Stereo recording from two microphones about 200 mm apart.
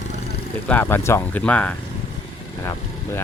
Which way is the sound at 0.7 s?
10° left (ahead or behind).